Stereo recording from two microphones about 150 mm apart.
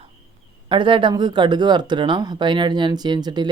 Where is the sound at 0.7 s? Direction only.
35° right (ahead or behind).